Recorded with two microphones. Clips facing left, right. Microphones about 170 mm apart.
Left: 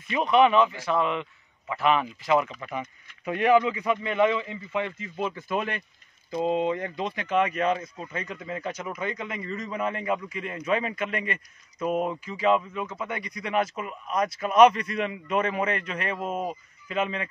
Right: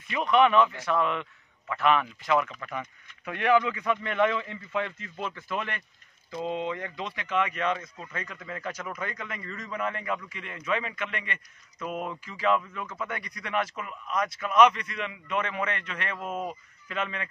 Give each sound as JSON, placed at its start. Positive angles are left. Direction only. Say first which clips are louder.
{"t": 0.1, "sound": "speech", "louder": "left 2 dB", "side_deg": 30}
{"t": 0.4, "sound": "speech", "louder": "left 1 dB", "side_deg": 5}
{"t": 7.3, "sound": "a man's voice", "louder": "left 4 dB", "side_deg": 35}